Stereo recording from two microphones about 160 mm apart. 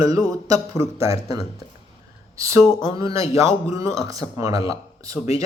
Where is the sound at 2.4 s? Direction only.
20° right (ahead or behind).